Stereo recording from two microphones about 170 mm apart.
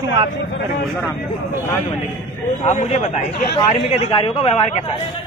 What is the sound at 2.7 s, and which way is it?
A man's voice, 40° left (ahead or behind).